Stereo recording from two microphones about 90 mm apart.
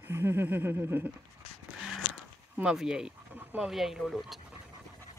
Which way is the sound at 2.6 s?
5° right (ahead or behind).